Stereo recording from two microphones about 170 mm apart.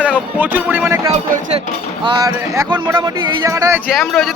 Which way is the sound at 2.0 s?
20° right (ahead or behind).